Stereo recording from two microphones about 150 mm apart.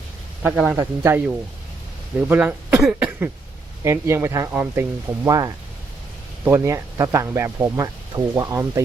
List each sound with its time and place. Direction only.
0.4 s speech: 5° right (ahead or behind)